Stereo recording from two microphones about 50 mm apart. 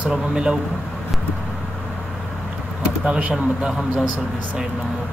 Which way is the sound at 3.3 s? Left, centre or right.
Centre.